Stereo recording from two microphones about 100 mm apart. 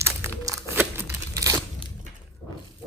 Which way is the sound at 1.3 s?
35° right (ahead or behind).